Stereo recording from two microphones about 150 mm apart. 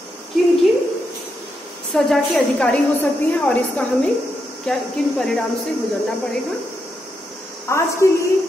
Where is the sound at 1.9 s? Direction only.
Centre (ahead or behind).